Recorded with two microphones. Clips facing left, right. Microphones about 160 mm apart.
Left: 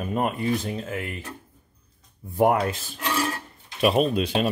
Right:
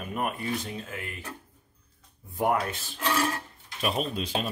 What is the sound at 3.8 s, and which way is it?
Speech, 70° left (ahead or behind).